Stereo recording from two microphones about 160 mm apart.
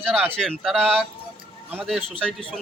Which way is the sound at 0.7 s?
10° right (ahead or behind).